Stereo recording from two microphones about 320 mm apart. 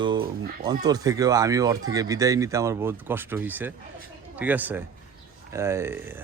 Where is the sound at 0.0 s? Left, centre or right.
Centre.